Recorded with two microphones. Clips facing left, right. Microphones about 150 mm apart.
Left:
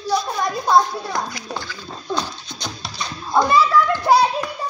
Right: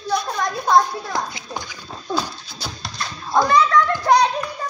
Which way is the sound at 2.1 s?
5° right (ahead or behind).